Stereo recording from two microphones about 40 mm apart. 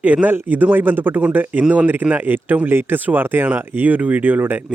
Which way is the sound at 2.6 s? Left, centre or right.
Right.